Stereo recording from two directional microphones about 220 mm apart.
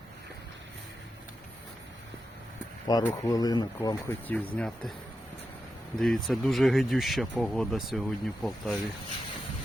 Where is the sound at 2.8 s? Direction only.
15° left (ahead or behind).